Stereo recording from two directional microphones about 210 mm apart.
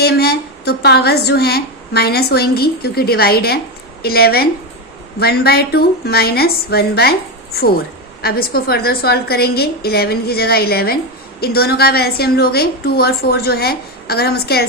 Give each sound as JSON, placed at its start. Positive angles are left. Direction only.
{"t": 0.0, "sound": "speech", "side_deg": 50}
{"t": 8.2, "sound": "speech", "side_deg": 45}